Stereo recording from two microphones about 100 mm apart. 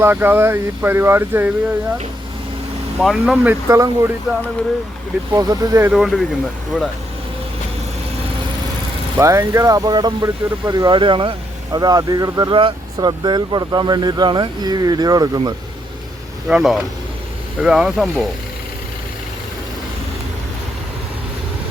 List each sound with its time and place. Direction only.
0.0 s speech: 20° right (ahead or behind)
3.0 s speech: 5° right (ahead or behind)
3.3 s speech: 15° right (ahead or behind)
3.7 s speech: 35° right (ahead or behind)
5.3 s speech: 35° right (ahead or behind)
5.9 s speech: 5° right (ahead or behind)
9.1 s speech: 25° right (ahead or behind)
10.9 s speech: 55° right (ahead or behind)
11.8 s speech: 40° right (ahead or behind)
12.5 s speech: 55° right (ahead or behind)
16.5 s speech: 5° right (ahead or behind)